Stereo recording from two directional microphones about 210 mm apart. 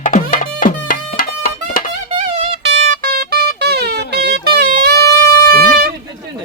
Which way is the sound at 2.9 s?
45° right (ahead or behind).